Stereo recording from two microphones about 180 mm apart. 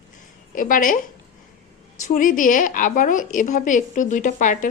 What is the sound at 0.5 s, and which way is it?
Speech, 50° left (ahead or behind).